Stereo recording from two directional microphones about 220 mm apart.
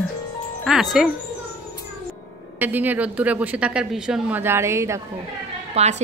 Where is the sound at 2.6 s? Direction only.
10° right (ahead or behind).